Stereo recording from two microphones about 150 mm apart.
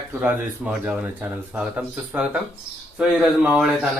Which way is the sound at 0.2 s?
5° right (ahead or behind).